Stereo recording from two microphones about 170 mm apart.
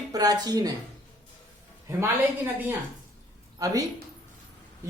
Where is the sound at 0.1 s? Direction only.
20° right (ahead or behind).